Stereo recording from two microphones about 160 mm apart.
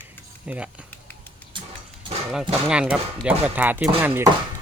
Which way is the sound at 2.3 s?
5° right (ahead or behind).